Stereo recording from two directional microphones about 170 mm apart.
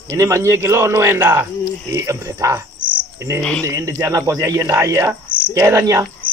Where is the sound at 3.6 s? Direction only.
20° right (ahead or behind).